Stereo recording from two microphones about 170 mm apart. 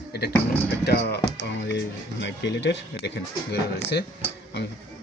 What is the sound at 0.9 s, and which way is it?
Speech, 70° left (ahead or behind).